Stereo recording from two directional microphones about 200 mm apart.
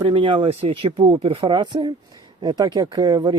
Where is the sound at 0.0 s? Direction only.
25° right (ahead or behind).